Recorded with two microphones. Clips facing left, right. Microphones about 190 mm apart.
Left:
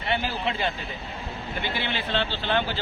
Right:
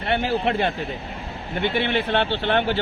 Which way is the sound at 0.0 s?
55° right (ahead or behind).